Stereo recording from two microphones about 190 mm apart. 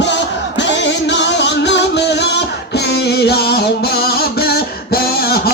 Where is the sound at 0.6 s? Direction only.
70° left (ahead or behind).